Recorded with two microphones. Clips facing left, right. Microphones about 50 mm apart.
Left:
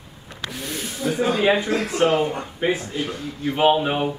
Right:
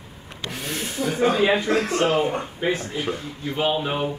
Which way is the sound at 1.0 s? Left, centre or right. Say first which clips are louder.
Left 1 dB; right.